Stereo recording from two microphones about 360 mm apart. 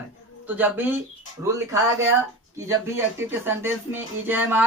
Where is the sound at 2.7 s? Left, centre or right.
Centre.